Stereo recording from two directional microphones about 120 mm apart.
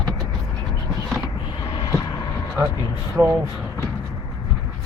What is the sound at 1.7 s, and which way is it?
Vehicle, 40° left (ahead or behind).